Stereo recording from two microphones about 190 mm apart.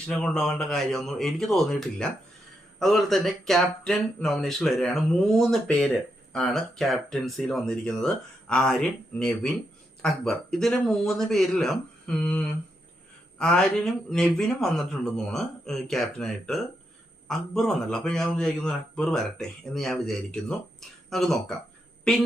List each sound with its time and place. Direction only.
0.1 s speech: 5° left (ahead or behind)